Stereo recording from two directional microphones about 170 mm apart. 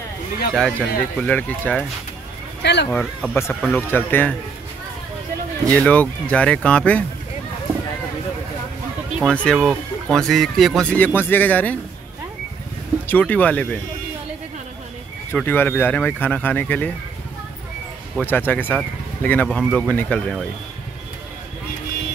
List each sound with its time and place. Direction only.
0.6 s speech: 5° left (ahead or behind)
2.6 s speech: 85° left
2.9 s speech: 10° left (ahead or behind)
5.7 s speech: 10° left (ahead or behind)
9.2 s speech: 5° left (ahead or behind)
13.1 s speech: 10° left (ahead or behind)
15.3 s speech: 10° left (ahead or behind)
18.2 s speech: 10° left (ahead or behind)